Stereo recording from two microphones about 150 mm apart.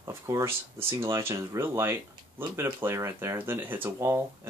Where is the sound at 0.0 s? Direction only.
20° right (ahead or behind).